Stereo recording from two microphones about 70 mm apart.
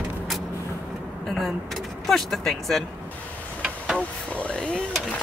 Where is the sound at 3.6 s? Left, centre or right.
Centre.